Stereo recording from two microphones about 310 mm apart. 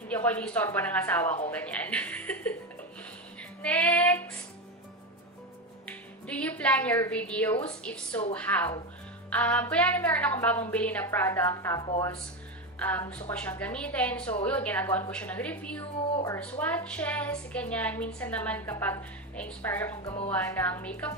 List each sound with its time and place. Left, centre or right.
0.1 s a woman's voice: centre
3.6 s a woman's voice: centre
5.9 s a woman's voice: centre
20.0 s speech: centre
20.2 s a woman's voice: centre